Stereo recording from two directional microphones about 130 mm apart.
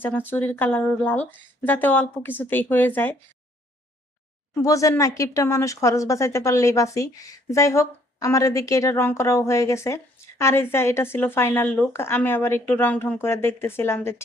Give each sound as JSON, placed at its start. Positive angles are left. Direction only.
{"t": 0.0, "sound": "speech", "side_deg": 15}
{"t": 4.6, "sound": "speech", "side_deg": 25}